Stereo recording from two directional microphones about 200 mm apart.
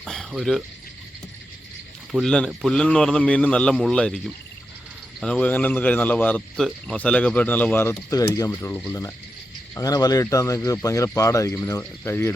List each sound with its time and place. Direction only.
0.0 s pour: centre (ahead or behind)
2.1 s a man's voice: 5° left (ahead or behind)
5.2 s speech: 5° left (ahead or behind)